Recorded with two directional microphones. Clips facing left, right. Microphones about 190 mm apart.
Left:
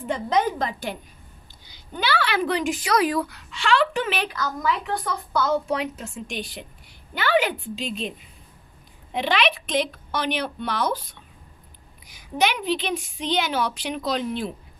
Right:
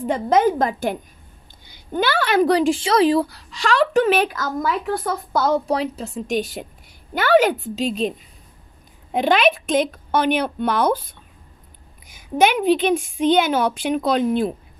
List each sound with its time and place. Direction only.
0.0 s a woman's voice: 40° right (ahead or behind)
9.1 s a woman's voice: 50° right (ahead or behind)